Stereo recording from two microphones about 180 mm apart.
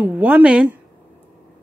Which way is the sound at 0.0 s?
10° right (ahead or behind).